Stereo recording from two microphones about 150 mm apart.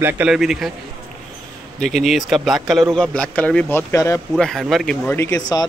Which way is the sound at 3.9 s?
20° left (ahead or behind).